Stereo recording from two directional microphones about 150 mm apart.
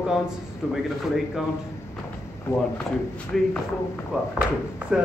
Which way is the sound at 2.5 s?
15° left (ahead or behind).